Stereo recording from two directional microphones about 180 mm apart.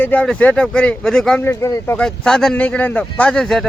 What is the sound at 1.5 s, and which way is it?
Speech, 15° left (ahead or behind).